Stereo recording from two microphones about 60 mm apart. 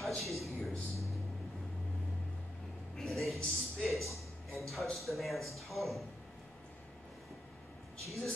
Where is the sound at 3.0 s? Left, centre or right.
Centre.